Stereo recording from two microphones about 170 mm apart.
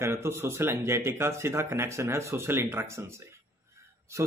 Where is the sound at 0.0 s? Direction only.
15° right (ahead or behind).